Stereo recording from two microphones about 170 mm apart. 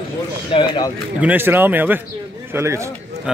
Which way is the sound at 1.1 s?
10° right (ahead or behind).